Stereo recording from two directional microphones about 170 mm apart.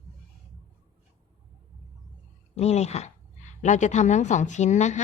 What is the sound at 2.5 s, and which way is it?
A woman's voice, 40° left (ahead or behind).